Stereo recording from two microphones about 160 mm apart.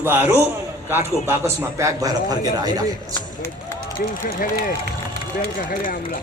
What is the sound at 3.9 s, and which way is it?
Speech, 60° left (ahead or behind).